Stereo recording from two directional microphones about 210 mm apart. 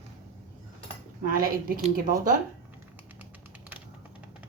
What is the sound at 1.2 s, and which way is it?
A woman's voice, 45° right (ahead or behind).